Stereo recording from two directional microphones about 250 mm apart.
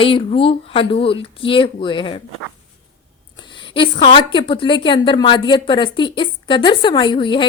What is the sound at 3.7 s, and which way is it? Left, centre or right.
A woman's voice, centre.